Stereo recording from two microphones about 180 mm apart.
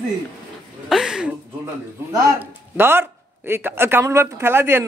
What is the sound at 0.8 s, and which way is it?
Speech, 5° right (ahead or behind).